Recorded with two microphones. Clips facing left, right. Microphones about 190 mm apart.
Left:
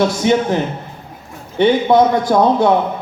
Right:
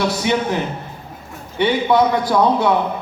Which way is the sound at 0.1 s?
45° left (ahead or behind).